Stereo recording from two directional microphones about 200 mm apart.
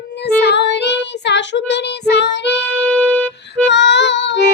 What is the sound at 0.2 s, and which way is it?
Child singing, 60° left (ahead or behind).